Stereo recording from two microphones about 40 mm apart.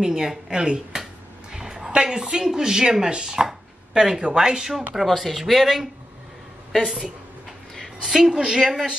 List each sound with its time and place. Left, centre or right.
0.0 s speech: centre
1.5 s a sound: centre
1.9 s speech: right
5.0 s speech: centre
8.0 s speech: centre